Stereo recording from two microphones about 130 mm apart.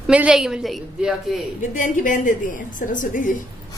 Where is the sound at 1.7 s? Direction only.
90° left.